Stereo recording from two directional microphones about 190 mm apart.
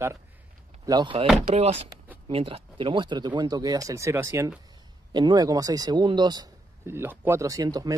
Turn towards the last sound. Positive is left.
turn(degrees=-20)  # may be behind; listen again after turning